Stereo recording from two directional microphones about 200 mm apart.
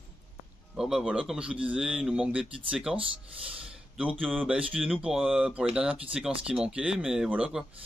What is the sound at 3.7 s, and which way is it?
Speech, 5° right (ahead or behind).